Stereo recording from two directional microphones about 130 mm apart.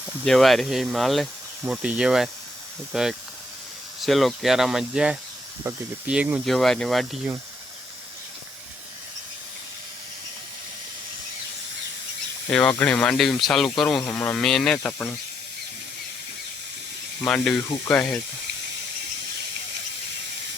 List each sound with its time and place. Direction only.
0.3 s speech: centre (ahead or behind)
5.7 s speech: 20° right (ahead or behind)
6.1 s speech: 10° right (ahead or behind)
12.5 s speech: 10° left (ahead or behind)
17.2 s speech: 5° left (ahead or behind)